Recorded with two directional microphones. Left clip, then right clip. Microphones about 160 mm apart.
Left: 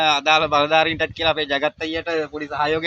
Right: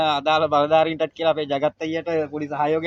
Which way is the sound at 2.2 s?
30° left (ahead or behind).